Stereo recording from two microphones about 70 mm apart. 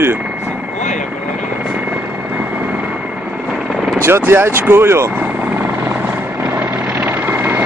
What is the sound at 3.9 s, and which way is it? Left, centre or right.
Speech, right.